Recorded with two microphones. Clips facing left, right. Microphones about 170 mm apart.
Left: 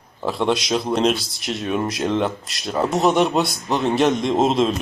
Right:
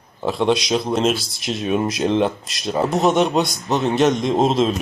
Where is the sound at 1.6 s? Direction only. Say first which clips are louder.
Right 3 dB; 15° right (ahead or behind).